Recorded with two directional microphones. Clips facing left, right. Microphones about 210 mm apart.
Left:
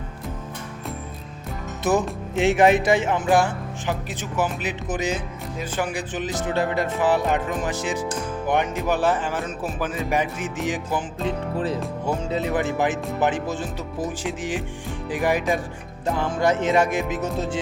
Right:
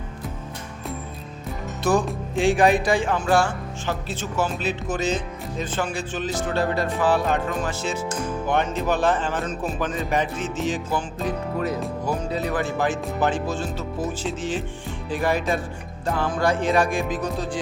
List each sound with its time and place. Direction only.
1.8 s music: 20° left (ahead or behind)
2.3 s speech: 20° left (ahead or behind)